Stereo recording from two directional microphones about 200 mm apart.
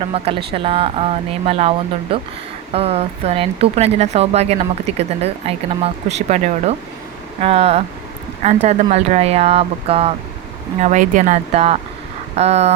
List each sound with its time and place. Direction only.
0.0 s speech: 30° right (ahead or behind)